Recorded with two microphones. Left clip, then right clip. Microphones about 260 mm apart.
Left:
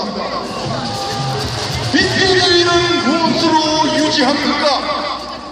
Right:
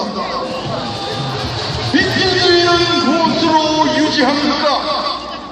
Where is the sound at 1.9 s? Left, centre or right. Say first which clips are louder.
Left 1 dB; left.